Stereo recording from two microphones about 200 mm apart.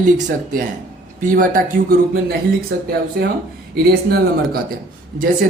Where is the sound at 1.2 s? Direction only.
40° right (ahead or behind).